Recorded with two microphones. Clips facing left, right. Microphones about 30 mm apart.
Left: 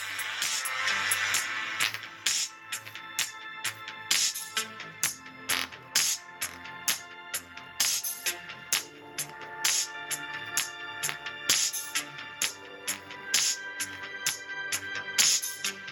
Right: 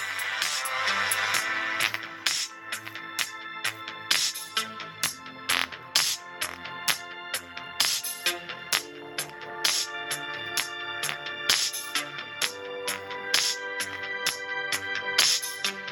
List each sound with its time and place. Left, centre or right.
0.0 s music: centre
0.3 s music: right
4.9 s music: right
14.5 s music: right